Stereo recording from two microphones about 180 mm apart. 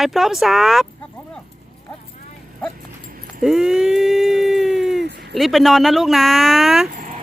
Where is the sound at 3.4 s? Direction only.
Centre (ahead or behind).